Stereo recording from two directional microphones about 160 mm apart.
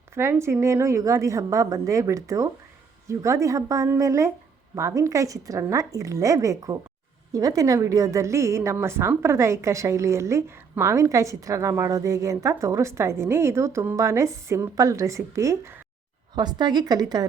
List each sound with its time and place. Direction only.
0.1 s a woman's voice: 15° right (ahead or behind)